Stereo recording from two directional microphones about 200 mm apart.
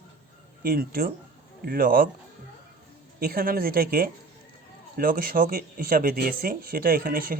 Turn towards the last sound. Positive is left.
turn(degrees=-45)  # may be behind; listen again after turning